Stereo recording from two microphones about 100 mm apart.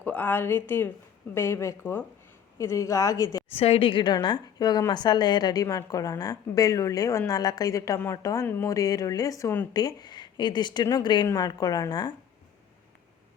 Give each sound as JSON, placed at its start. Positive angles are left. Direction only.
{"t": 0.0, "sound": "a woman's voice", "side_deg": 15}
{"t": 3.5, "sound": "a woman's voice", "side_deg": 85}
{"t": 11.3, "sound": "a woman's voice", "side_deg": 35}